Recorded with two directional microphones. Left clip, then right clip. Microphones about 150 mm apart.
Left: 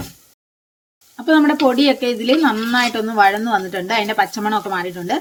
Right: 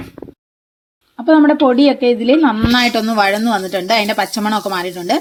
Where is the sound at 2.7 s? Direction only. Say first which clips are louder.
Right 2 dB; 30° right (ahead or behind).